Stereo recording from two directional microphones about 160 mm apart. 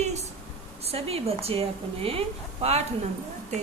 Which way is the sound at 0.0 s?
45° right (ahead or behind).